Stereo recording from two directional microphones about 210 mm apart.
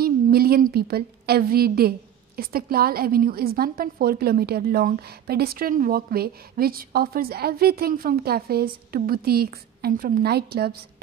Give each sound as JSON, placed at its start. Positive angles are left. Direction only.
{"t": 0.0, "sound": "a woman's voice", "side_deg": -45}